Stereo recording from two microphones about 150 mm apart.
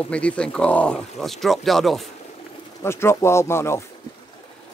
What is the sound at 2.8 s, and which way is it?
Speech, 15° left (ahead or behind).